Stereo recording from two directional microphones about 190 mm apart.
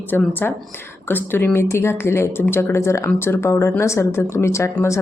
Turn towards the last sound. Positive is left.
turn(degrees=15)  # may be behind; listen again after turning